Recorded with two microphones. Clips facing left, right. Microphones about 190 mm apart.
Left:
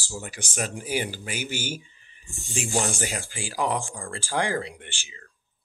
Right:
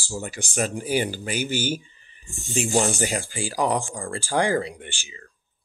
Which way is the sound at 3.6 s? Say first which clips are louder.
Right 3 dB; 40° right (ahead or behind).